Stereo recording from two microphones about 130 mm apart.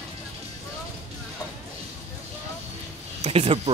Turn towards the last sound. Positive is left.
turn(degrees=-50)  # may be behind; listen again after turning